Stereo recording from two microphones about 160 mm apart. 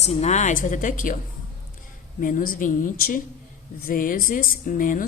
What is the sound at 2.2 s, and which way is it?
Speech, 60° left (ahead or behind).